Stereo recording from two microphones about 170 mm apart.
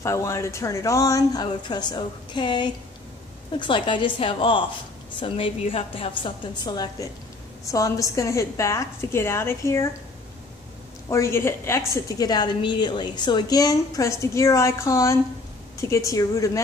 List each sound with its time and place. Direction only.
0.0 s a woman's voice: 15° left (ahead or behind)
11.1 s a woman's voice: 15° left (ahead or behind)